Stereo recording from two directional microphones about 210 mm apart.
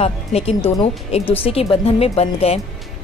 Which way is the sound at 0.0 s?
30° left (ahead or behind).